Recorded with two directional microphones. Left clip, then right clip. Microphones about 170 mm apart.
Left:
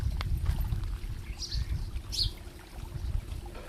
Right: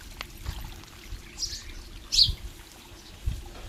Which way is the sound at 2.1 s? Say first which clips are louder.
Right 11 dB; 70° left (ahead or behind).